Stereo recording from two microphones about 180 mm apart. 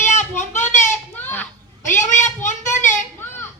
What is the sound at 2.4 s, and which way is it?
Child singing, 45° left (ahead or behind).